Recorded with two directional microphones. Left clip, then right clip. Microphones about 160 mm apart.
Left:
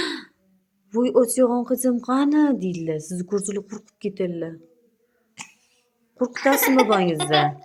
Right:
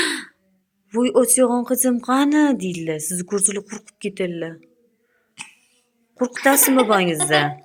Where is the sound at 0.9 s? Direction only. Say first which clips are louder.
Right 2 dB; 10° right (ahead or behind).